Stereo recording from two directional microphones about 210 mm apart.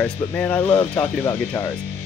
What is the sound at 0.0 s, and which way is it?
Speech, 10° left (ahead or behind).